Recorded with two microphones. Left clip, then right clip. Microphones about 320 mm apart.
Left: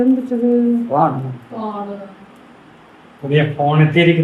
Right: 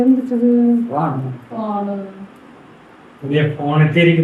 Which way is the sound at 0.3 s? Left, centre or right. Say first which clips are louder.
Right 1 dB; centre.